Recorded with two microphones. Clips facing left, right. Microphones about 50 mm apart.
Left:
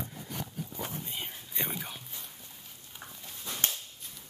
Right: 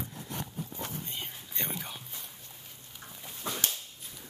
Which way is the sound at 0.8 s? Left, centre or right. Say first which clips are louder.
Left 2 dB; centre.